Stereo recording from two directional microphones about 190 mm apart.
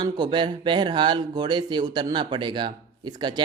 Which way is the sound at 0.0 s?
25° right (ahead or behind).